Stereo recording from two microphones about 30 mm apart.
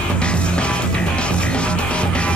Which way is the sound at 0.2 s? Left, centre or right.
Left.